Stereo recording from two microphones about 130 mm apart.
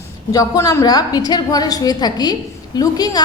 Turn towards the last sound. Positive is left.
turn(degrees=30)  # may be behind; listen again after turning